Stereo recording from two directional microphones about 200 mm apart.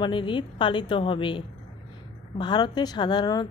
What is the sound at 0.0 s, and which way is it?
Speech, 25° left (ahead or behind).